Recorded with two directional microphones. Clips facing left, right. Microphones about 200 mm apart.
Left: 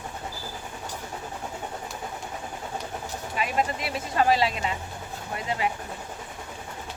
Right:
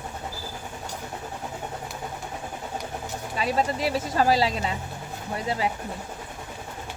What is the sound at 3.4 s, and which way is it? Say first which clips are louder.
Speech: right 2 dB; 35° right (ahead or behind).